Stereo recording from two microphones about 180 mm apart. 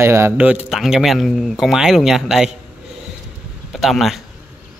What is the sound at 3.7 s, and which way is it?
Speech, centre (ahead or behind).